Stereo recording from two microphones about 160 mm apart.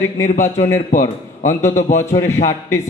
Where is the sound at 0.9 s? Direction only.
50° left (ahead or behind).